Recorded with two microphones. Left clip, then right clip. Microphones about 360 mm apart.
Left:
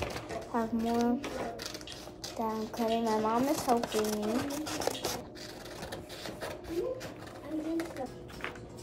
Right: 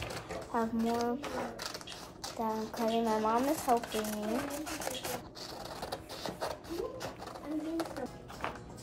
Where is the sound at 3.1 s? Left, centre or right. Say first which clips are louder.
Left 1 dB; centre.